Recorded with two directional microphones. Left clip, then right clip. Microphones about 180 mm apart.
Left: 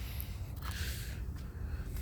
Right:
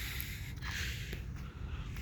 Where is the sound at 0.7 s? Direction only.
35° left (ahead or behind).